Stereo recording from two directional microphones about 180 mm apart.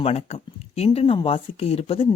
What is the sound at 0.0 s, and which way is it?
Speech, 35° left (ahead or behind).